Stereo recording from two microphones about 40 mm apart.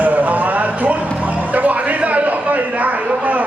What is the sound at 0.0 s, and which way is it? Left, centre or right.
Music, right.